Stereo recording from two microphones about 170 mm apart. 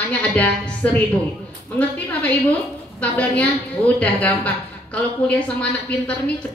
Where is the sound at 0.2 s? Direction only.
10° left (ahead or behind).